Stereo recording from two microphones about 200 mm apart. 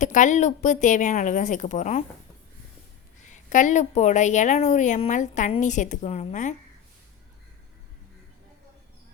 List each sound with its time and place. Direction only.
0.0 s a woman's voice: 40° left (ahead or behind)
3.2 s a woman's voice: 40° left (ahead or behind)